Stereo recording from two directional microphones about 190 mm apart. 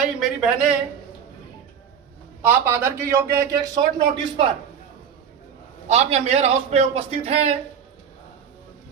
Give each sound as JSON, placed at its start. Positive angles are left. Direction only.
{"t": 0.3, "sound": "speech", "side_deg": -5}
{"t": 2.4, "sound": "a man's voice", "side_deg": -10}
{"t": 5.9, "sound": "a man's voice", "side_deg": -35}